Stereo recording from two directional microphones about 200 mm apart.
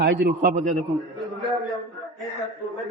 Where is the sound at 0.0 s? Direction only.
50° right (ahead or behind).